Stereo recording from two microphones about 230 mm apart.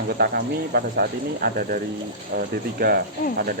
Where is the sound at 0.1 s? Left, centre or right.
Right.